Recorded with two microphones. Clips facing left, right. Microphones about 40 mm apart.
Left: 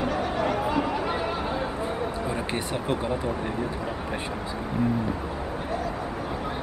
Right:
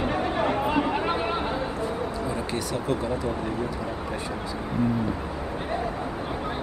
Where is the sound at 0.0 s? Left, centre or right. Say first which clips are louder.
Right 1 dB; right.